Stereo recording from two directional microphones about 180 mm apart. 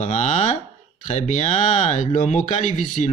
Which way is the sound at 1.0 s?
40° left (ahead or behind).